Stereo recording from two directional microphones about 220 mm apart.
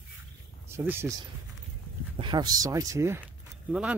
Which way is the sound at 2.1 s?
20° right (ahead or behind).